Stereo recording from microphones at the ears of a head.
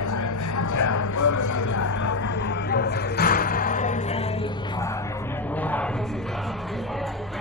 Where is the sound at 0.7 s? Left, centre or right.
Left.